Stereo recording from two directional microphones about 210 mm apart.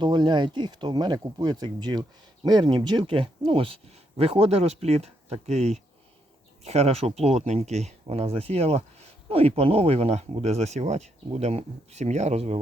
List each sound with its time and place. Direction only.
0.0 s speech: 20° right (ahead or behind)